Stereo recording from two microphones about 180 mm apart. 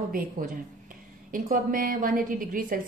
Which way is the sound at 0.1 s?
50° right (ahead or behind).